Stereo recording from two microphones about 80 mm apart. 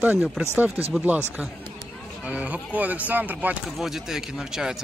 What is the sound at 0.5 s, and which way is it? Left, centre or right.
Speech, right.